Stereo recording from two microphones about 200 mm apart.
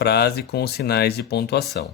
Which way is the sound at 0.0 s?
55° left (ahead or behind).